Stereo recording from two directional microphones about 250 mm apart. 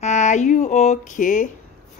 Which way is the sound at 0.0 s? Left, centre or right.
Left.